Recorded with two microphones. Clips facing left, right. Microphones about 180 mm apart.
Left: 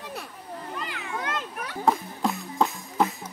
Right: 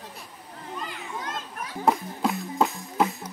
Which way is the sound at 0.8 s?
70° left (ahead or behind).